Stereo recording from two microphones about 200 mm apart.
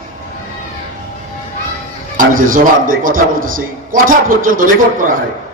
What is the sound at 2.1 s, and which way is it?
A man's voice, 40° right (ahead or behind).